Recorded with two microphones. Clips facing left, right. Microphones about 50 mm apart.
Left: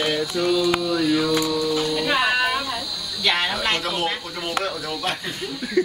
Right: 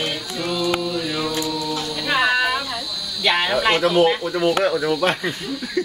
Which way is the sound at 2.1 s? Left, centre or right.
Centre.